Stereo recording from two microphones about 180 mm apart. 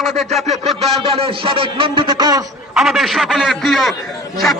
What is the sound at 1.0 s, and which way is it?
Speech, 30° right (ahead or behind).